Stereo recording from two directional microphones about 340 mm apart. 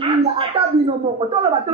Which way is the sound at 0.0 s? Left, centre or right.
Centre.